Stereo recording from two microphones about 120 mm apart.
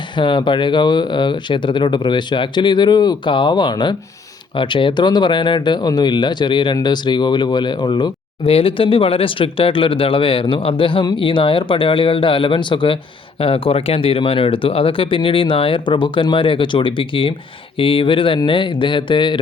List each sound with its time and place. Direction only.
0.2 s speech: 40° left (ahead or behind)
8.4 s speech: 50° left (ahead or behind)